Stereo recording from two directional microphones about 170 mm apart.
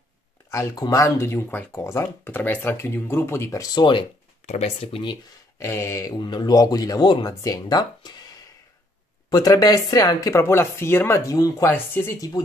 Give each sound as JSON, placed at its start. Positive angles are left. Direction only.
{"t": 0.5, "sound": "speech", "side_deg": 15}
{"t": 4.5, "sound": "speech", "side_deg": 40}
{"t": 5.6, "sound": "speech", "side_deg": 15}